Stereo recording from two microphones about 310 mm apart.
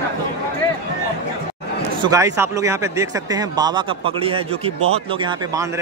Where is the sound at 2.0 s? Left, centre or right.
Centre.